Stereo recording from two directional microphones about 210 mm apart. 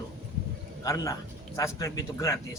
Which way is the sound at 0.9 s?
15° left (ahead or behind).